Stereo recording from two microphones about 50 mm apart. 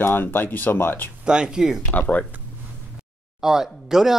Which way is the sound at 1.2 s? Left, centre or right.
Centre.